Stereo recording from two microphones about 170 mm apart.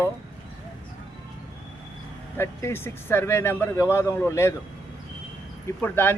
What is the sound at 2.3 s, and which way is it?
A man's voice, 15° left (ahead or behind).